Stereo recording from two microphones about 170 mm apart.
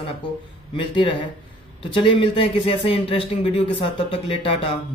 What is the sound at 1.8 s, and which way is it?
Speech, 30° left (ahead or behind).